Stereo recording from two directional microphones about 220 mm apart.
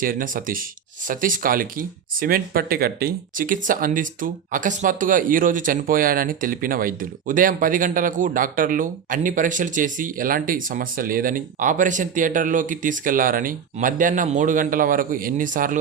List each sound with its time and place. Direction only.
0.0 s speech: 40° right (ahead or behind)